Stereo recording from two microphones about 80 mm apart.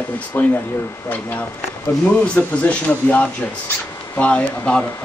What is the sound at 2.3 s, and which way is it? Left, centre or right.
Speech, centre.